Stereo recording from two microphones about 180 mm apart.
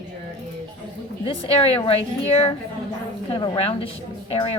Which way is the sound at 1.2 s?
30° left (ahead or behind).